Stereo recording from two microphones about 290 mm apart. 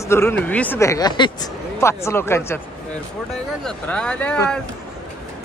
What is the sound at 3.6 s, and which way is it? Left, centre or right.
Speech, centre.